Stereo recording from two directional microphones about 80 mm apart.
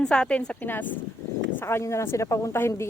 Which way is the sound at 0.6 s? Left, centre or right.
Left.